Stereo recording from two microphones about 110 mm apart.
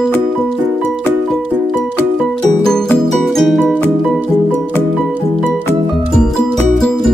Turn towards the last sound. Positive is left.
turn(degrees=5)  # may be behind; listen again after turning